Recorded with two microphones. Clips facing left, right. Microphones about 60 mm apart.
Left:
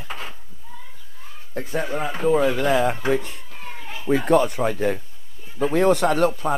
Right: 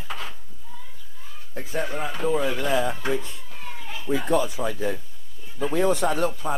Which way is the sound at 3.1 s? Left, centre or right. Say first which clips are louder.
Left 5 dB; left.